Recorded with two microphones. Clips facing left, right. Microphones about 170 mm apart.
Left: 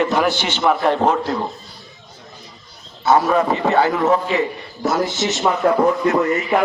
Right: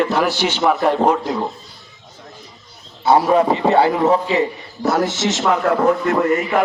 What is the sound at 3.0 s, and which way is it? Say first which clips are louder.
A man's voice: right 2 dB; 30° right (ahead or behind).